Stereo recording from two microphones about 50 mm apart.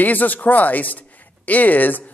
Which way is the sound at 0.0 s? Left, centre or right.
Left.